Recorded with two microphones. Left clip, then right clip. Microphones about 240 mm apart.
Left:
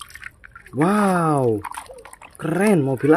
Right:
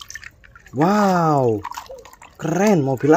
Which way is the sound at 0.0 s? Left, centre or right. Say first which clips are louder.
Right 1 dB; centre.